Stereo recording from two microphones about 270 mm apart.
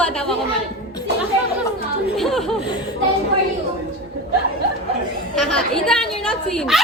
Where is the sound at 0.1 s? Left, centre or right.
Centre.